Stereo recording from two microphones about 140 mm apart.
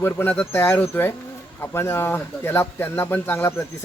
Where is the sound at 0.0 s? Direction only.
15° left (ahead or behind).